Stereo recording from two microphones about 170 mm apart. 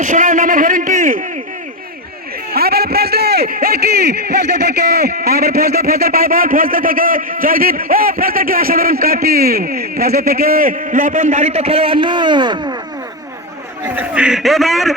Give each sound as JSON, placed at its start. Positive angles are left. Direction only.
{"t": 0.0, "sound": "a man's voice", "side_deg": -45}
{"t": 2.5, "sound": "a man's voice", "side_deg": -65}
{"t": 13.9, "sound": "a man's voice", "side_deg": -10}